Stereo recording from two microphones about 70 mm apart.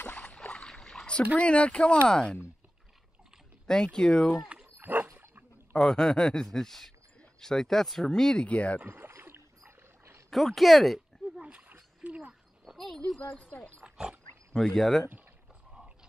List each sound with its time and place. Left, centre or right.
0.0 s rowboat: centre
1.4 s speech: centre
3.6 s speech: centre
4.4 s dog: centre
4.7 s dog: right
5.8 s speech: centre
8.8 s rowboat: right
10.3 s speech: centre
11.4 s a sound: centre
12.6 s speech: centre
13.3 s speech: centre
13.8 s pig: centre
14.5 s speech: centre